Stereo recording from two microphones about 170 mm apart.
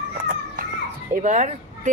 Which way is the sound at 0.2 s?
55° right (ahead or behind).